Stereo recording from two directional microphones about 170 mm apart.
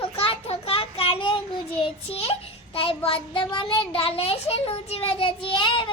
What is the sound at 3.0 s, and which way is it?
A child's voice, 30° left (ahead or behind).